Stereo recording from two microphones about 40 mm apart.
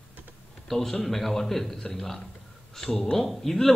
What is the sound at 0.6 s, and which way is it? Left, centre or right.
A man's voice, centre.